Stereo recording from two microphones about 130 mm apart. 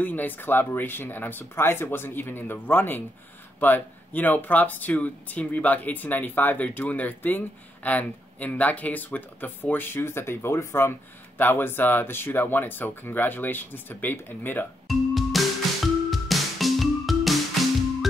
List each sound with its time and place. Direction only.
0.0 s speech: 15° left (ahead or behind)
14.9 s music: centre (ahead or behind)